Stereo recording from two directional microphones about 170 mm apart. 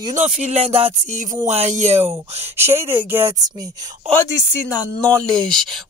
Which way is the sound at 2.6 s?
15° right (ahead or behind).